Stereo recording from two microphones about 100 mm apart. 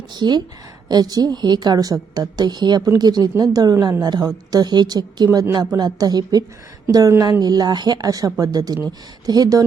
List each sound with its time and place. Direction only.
0.1 s a woman's voice: 45° right (ahead or behind)